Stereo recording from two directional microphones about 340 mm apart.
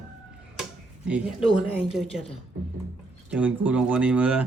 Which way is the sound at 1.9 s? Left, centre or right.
Centre.